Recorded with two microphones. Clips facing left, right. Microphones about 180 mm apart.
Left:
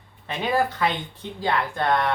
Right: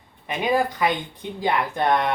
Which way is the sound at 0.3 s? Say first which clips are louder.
Right 2 dB; 15° right (ahead or behind).